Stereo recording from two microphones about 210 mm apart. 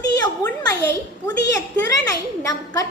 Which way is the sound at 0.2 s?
15° left (ahead or behind).